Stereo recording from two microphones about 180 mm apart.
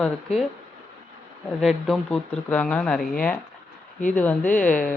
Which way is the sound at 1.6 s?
Centre (ahead or behind).